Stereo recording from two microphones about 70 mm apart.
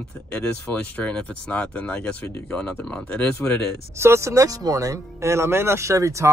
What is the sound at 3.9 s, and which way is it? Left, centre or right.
Speech, right.